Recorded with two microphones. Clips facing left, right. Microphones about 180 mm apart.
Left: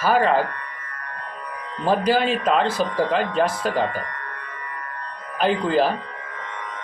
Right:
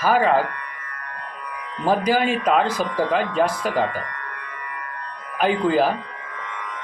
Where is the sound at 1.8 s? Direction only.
10° right (ahead or behind).